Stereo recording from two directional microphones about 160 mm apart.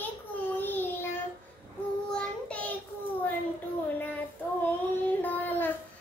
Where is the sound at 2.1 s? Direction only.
10° left (ahead or behind).